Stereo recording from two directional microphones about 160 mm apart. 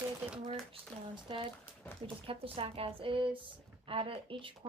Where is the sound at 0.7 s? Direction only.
30° right (ahead or behind).